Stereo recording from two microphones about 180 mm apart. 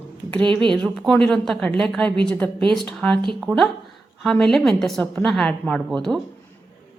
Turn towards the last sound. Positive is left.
turn(degrees=0)  # may be behind; listen again after turning